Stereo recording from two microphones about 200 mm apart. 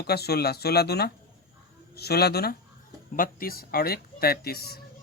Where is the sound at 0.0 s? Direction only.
50° left (ahead or behind).